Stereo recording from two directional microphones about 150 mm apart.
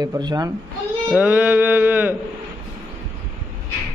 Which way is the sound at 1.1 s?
10° right (ahead or behind).